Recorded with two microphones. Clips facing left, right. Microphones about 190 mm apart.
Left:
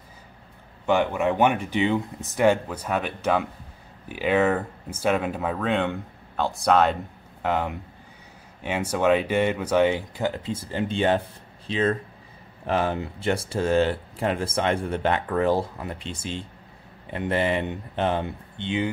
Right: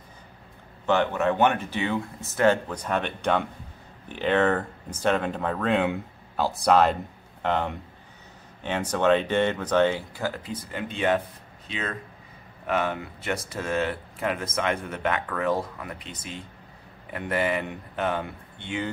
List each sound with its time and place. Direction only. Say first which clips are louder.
0.8 s speech: left 1 dB; 10° left (ahead or behind)